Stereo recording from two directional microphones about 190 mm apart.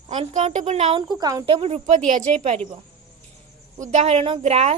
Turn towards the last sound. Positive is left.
turn(degrees=-30)  # may be behind; listen again after turning